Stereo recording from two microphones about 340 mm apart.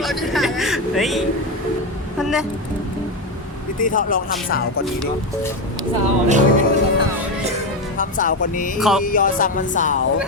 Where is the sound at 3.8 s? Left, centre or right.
Left.